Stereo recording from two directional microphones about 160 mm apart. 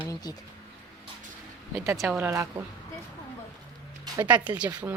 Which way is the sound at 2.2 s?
20° right (ahead or behind).